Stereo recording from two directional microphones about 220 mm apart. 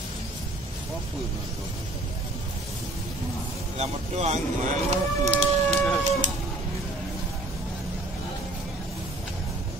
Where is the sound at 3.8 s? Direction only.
30° right (ahead or behind).